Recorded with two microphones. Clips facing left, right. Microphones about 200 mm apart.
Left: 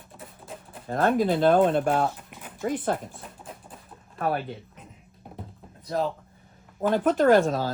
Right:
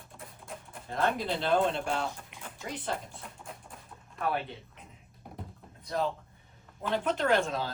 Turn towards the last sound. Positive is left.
turn(degrees=45)  # may be behind; listen again after turning